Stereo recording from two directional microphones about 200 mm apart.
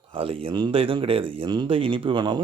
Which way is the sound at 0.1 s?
30° right (ahead or behind).